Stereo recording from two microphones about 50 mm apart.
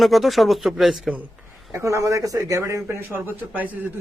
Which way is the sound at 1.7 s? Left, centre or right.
Right.